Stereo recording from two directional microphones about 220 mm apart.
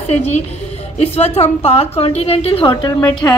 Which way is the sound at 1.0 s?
30° left (ahead or behind).